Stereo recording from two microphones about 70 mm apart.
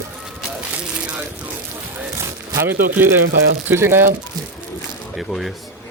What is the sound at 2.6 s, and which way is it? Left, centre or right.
Speech, right.